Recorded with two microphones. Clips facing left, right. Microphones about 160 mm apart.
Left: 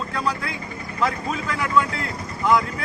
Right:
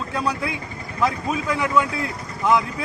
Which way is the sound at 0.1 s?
15° right (ahead or behind).